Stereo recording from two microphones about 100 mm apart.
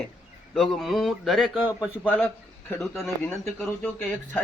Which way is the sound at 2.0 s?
10° left (ahead or behind).